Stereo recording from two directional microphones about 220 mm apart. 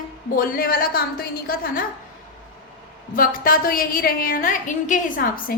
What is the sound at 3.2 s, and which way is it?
A woman's voice, 40° left (ahead or behind).